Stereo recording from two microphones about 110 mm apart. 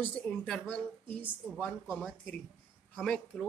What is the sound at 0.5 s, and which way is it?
Speech, 10° left (ahead or behind).